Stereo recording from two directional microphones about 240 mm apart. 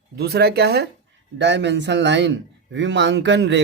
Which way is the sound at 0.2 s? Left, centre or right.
Right.